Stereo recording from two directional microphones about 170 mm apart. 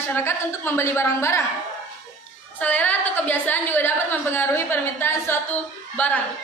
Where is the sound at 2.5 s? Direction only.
10° left (ahead or behind).